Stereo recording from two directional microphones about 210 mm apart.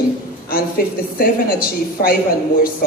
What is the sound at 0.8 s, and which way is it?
Speech, 45° left (ahead or behind).